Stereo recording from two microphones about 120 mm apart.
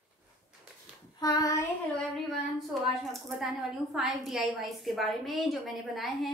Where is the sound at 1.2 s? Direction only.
35° left (ahead or behind).